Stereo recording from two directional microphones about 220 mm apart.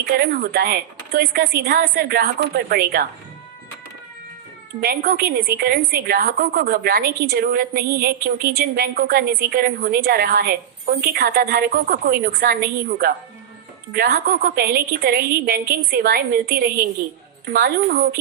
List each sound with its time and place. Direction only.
0.0 s a woman's voice: 45° right (ahead or behind)
4.8 s a woman's voice: 45° right (ahead or behind)